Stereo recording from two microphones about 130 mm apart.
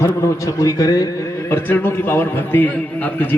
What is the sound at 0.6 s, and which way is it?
Speech, 30° left (ahead or behind).